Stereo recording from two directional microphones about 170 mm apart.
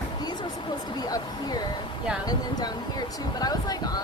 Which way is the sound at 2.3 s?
25° left (ahead or behind).